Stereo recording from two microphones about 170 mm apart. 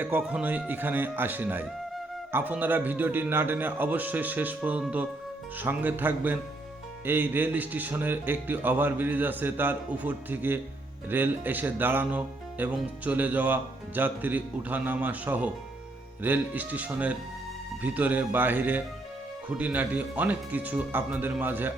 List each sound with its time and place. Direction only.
0.0 s speech: 10° right (ahead or behind)